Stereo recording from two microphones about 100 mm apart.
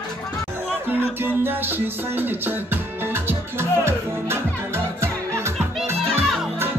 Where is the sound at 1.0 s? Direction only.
20° right (ahead or behind).